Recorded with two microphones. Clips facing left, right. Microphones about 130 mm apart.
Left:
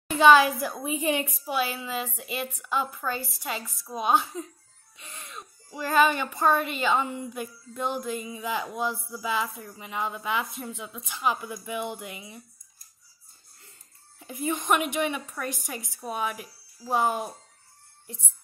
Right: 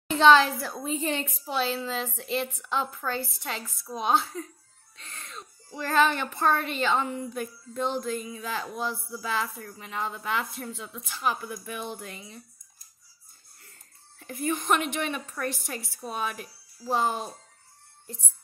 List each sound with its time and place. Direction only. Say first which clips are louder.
0.1 s speech: left 1 dB; 10° left (ahead or behind)
14.2 s speech: even; 15° left (ahead or behind)
18.0 s music: right 1 dB; 15° left (ahead or behind)